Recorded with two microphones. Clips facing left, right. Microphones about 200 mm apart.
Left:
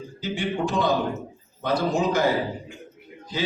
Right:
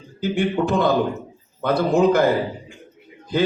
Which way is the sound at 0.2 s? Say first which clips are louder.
Right 6 dB; 60° right (ahead or behind).